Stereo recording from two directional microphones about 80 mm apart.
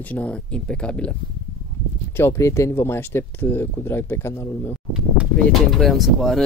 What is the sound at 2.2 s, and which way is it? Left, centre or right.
Speech, left.